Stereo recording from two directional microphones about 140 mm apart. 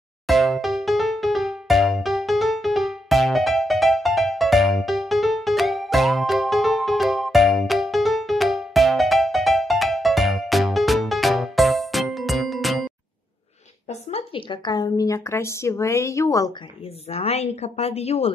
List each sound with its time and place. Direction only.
0.3 s music: centre (ahead or behind)
13.8 s a woman's voice: 40° left (ahead or behind); by 16.5 s 25° left (ahead or behind)
17.1 s a woman's voice: 45° left (ahead or behind)